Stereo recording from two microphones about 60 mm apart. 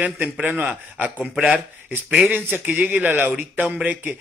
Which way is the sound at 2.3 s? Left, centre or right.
Right.